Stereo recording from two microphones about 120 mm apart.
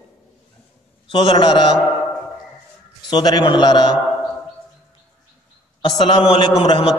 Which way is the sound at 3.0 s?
40° left (ahead or behind).